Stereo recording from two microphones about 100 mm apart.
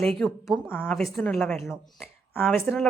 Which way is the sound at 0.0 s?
5° left (ahead or behind).